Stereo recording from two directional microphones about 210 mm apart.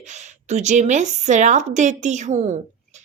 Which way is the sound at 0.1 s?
35° right (ahead or behind).